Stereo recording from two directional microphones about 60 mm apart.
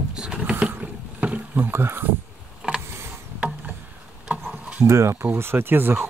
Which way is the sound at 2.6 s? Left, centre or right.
Centre.